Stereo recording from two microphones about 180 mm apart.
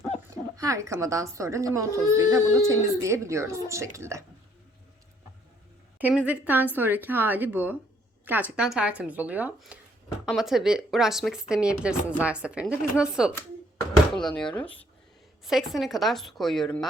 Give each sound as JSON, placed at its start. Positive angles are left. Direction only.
{"t": 0.5, "sound": "speech", "side_deg": -15}
{"t": 6.0, "sound": "speech", "side_deg": -10}